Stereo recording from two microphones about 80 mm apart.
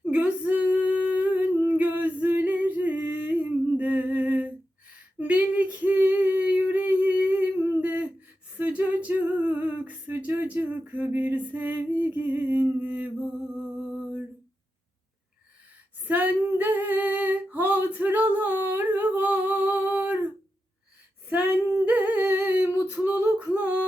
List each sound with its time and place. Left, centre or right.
0.0 s a sound: centre
5.2 s female singing: centre
8.5 s singing: right
16.0 s female singing: right
21.2 s female singing: right
23.4 s a sound: right